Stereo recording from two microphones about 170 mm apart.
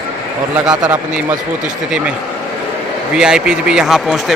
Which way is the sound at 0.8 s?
10° right (ahead or behind).